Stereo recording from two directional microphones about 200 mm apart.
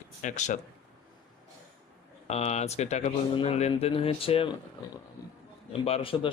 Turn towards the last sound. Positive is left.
turn(degrees=30)  # may be behind; listen again after turning